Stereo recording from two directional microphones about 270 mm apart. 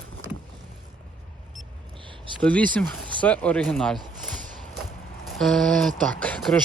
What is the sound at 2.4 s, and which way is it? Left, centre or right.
Speech, centre.